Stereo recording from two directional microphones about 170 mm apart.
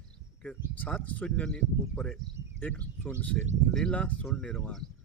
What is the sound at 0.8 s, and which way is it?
Speech, 10° left (ahead or behind).